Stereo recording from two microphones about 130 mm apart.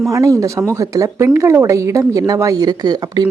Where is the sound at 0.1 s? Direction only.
25° right (ahead or behind).